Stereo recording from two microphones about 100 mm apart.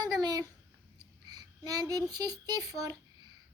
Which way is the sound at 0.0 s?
40° right (ahead or behind).